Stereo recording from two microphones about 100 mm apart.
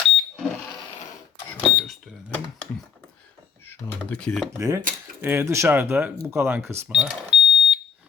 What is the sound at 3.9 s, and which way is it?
Speech, 10° left (ahead or behind).